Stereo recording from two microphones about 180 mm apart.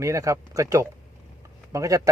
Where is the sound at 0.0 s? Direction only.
15° right (ahead or behind).